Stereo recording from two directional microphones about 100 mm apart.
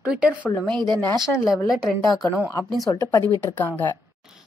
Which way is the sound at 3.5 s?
20° left (ahead or behind).